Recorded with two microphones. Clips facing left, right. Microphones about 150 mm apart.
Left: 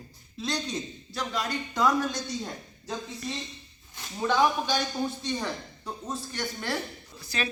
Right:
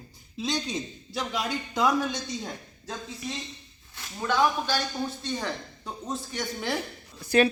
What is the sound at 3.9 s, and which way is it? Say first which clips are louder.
Speech: left 1 dB; 15° left (ahead or behind).